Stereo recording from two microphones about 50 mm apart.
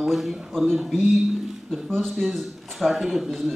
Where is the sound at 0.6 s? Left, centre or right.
Centre.